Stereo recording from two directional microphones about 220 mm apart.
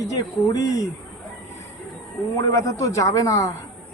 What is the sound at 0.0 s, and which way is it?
Speech, 15° left (ahead or behind).